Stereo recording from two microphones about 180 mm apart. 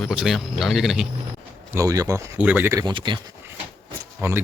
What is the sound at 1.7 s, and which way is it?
Speech, 20° right (ahead or behind).